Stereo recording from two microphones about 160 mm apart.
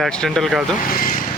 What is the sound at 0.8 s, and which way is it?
Vehicle, 65° left (ahead or behind).